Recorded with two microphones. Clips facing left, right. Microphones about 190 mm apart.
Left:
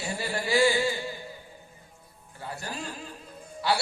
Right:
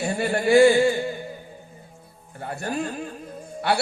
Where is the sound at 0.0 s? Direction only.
55° right (ahead or behind).